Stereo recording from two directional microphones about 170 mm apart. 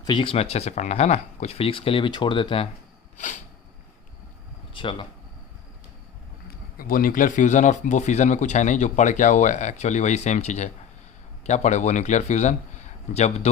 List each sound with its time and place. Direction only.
0.0 s speech: 25° left (ahead or behind)
4.7 s speech: 30° left (ahead or behind)
6.7 s a man's voice: 55° left (ahead or behind); by 13.5 s 40° left (ahead or behind)